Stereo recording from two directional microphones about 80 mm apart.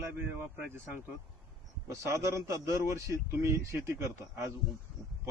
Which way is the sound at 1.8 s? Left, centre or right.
Right.